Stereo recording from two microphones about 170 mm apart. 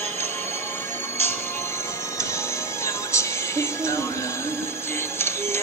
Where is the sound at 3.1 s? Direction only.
15° left (ahead or behind).